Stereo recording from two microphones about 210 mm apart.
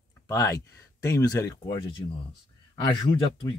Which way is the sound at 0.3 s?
15° left (ahead or behind).